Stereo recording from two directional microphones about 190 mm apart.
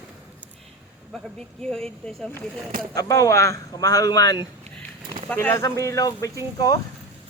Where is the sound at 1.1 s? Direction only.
5° left (ahead or behind).